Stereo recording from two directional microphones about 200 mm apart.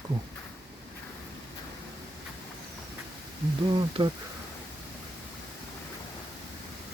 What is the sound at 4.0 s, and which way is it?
Speech, 20° right (ahead or behind).